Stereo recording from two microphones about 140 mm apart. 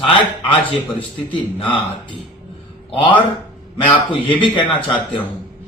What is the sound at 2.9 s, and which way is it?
A man's voice, 40° left (ahead or behind).